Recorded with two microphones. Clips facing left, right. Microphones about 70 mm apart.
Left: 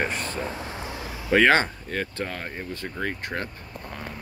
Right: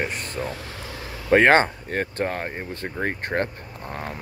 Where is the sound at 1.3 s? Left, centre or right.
Right.